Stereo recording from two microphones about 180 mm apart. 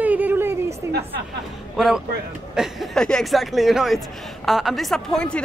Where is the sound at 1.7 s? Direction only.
Centre (ahead or behind).